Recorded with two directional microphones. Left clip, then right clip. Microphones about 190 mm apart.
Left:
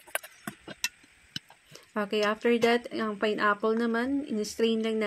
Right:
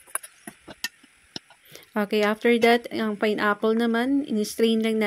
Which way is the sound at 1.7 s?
35° right (ahead or behind).